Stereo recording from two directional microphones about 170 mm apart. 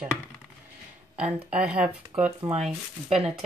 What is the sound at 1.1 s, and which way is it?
Speech, 5° right (ahead or behind).